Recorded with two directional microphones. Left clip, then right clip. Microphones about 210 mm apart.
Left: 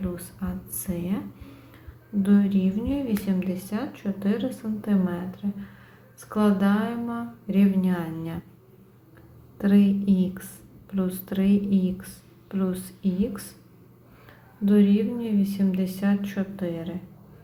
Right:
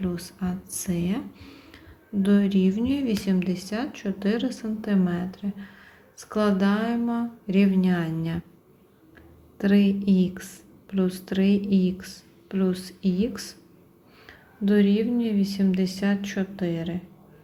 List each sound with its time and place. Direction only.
0.0 s a sound: 40° right (ahead or behind)
0.7 s speech: 40° right (ahead or behind)
2.2 s speech: 40° right (ahead or behind)
9.6 s speech: 30° right (ahead or behind)
14.6 s speech: 30° right (ahead or behind)